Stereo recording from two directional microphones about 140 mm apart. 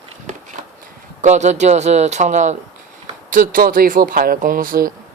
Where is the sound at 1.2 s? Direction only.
55° right (ahead or behind).